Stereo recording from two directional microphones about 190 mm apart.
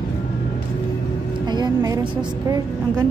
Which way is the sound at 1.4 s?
20° right (ahead or behind).